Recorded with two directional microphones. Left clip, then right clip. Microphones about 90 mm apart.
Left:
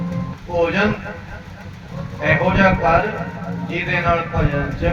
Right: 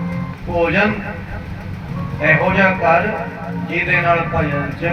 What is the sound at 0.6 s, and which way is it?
Speech, 30° left (ahead or behind).